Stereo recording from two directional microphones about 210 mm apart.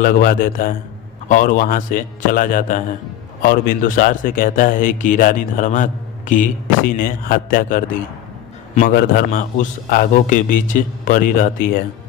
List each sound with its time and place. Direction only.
0.0 s a man's voice: 40° left (ahead or behind)